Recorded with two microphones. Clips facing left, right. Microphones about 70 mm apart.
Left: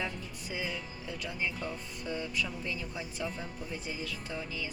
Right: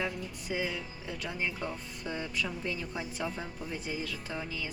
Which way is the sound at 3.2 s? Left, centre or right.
Right.